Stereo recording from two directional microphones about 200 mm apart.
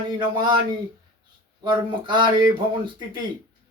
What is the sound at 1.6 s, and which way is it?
Speech, 20° right (ahead or behind).